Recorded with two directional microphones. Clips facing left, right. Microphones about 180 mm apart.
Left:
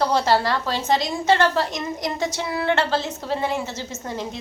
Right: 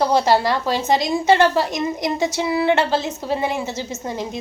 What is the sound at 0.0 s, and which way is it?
A woman's voice, 15° right (ahead or behind).